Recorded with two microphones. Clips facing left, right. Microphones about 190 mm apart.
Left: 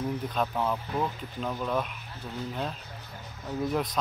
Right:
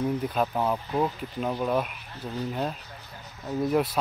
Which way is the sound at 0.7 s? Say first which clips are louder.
Right 3 dB; 20° right (ahead or behind).